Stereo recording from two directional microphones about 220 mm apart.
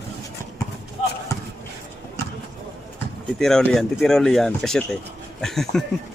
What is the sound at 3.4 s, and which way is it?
Speech, centre (ahead or behind).